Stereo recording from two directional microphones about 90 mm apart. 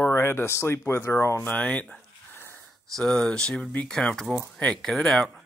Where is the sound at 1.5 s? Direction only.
15° left (ahead or behind).